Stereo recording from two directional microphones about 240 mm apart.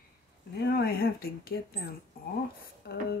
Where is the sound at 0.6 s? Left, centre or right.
Left.